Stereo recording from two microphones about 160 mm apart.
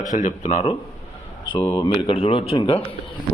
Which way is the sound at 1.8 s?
30° left (ahead or behind).